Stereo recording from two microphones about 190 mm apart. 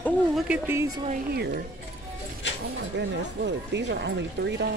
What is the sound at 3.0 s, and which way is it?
Speech, 65° right (ahead or behind).